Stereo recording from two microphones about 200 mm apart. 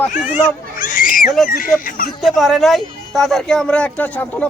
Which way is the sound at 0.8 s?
45° left (ahead or behind).